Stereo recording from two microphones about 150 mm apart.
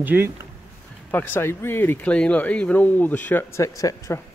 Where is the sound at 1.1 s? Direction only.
10° left (ahead or behind).